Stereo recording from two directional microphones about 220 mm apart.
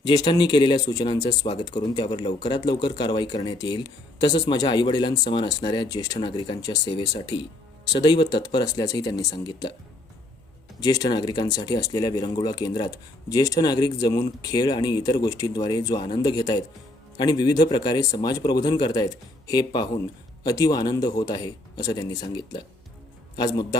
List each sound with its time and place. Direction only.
0.0 s speech: 20° left (ahead or behind)
10.8 s speech: 15° left (ahead or behind)